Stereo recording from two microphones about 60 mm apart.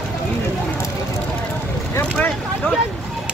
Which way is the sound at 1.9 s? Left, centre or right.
Left.